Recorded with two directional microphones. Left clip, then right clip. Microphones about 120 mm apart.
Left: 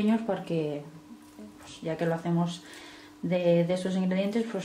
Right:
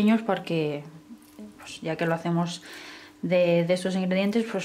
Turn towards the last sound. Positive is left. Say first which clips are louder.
# right 4 dB
turn(degrees=-25)  # may be behind; listen again after turning